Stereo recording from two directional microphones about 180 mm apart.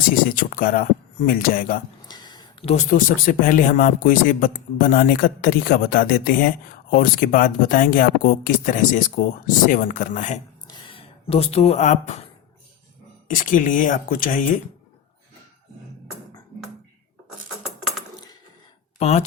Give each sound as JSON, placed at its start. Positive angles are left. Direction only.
{"t": 0.3, "sound": "a man's voice", "side_deg": 50}
{"t": 2.0, "sound": "a sound", "side_deg": 25}
{"t": 2.6, "sound": "a man's voice", "side_deg": 45}
{"t": 10.7, "sound": "speech", "side_deg": 30}
{"t": 13.2, "sound": "a man's voice", "side_deg": 45}
{"t": 17.6, "sound": "coin", "side_deg": 0}
{"t": 18.9, "sound": "speech", "side_deg": 35}